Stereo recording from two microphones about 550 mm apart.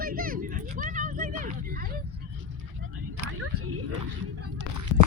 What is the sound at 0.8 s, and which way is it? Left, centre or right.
Vehicle, centre.